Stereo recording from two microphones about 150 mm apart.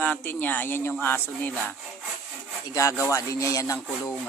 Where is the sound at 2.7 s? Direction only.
20° left (ahead or behind).